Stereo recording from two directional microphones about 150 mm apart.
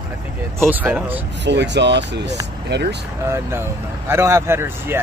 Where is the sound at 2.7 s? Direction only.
90° right.